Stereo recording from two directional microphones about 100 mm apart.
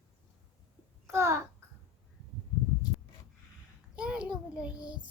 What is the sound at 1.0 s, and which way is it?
Speech, 25° right (ahead or behind).